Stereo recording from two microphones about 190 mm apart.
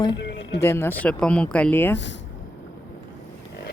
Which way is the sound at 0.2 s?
65° left (ahead or behind).